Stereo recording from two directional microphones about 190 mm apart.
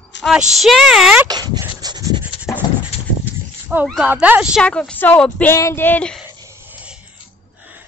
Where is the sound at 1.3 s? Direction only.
20° right (ahead or behind).